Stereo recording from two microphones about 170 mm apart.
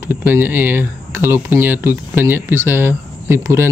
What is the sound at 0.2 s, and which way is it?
Speech, 10° right (ahead or behind).